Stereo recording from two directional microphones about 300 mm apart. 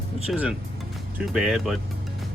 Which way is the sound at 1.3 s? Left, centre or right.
Centre.